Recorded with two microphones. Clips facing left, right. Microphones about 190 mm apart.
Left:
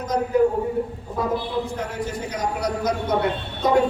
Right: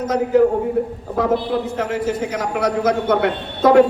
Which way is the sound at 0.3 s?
75° right (ahead or behind).